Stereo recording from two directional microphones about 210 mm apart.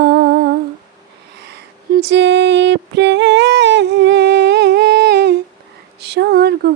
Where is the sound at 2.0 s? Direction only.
55° right (ahead or behind).